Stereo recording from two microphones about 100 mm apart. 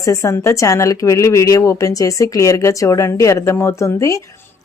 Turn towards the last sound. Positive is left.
turn(degrees=30)  # may be behind; listen again after turning